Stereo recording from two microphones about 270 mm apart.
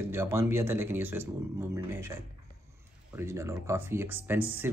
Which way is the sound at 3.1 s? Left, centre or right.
Centre.